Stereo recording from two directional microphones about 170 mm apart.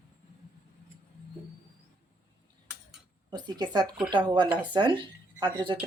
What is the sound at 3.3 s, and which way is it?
Speech, 25° right (ahead or behind).